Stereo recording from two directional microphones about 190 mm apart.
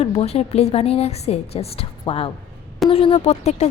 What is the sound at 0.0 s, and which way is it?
Speech, 30° left (ahead or behind).